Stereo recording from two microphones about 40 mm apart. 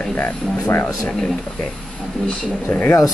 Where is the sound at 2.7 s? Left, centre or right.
Left.